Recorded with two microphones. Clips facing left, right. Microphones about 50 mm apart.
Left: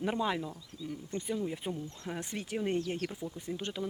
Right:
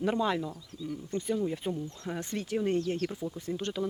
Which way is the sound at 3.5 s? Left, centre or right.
Centre.